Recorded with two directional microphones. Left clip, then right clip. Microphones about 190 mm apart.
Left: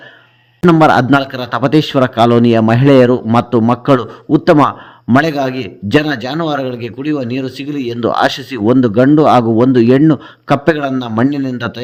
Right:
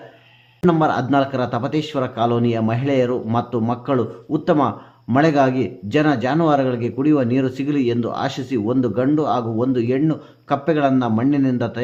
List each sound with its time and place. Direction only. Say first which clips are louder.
0.6 s a man's voice: left 9 dB; 40° left (ahead or behind)
10.8 s a man's voice: even; 5° left (ahead or behind)
11.0 s a man's voice: left 3 dB; 45° left (ahead or behind)